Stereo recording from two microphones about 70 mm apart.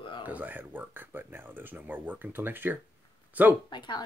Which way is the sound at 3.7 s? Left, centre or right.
Left.